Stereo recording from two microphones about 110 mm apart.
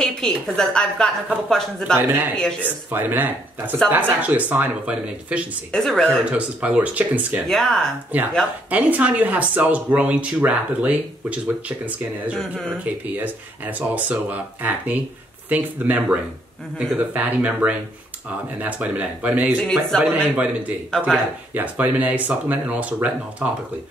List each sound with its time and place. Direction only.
0.0 s a woman's voice: 5° left (ahead or behind)
2.0 s speech: 15° right (ahead or behind)
5.7 s a woman's voice: 5° left (ahead or behind)
6.3 s speech: 15° right (ahead or behind)
7.4 s a woman's voice: 5° left (ahead or behind)
8.1 s speech: 15° right (ahead or behind)
12.4 s a woman's voice: 5° left (ahead or behind)
12.7 s speech: 15° right (ahead or behind)
19.6 s a woman's voice: centre (ahead or behind)
21.5 s speech: 15° right (ahead or behind)